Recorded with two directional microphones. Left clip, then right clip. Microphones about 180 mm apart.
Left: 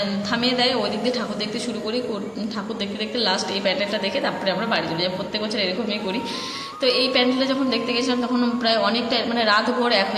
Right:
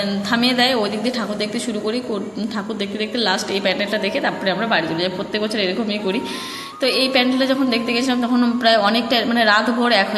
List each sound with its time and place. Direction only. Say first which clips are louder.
0.3 s a woman's voice: right 4 dB; 25° right (ahead or behind)
3.2 s a woman's voice: right 2 dB; 25° right (ahead or behind)